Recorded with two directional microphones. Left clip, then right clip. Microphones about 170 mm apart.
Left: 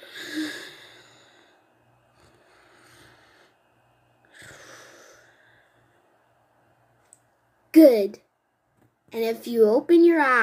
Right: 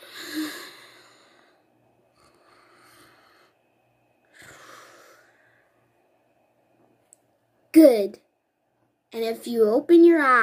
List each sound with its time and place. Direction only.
0.0 s gasp: 15° right (ahead or behind)
2.1 s a sound: 10° right (ahead or behind)
4.3 s wheeze: 10° right (ahead or behind)
7.7 s speech: 10° right (ahead or behind)